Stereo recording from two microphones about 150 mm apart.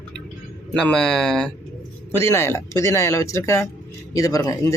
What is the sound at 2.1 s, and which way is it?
Speech, 15° left (ahead or behind).